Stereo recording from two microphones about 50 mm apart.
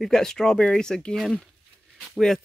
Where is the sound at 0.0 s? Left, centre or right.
Centre.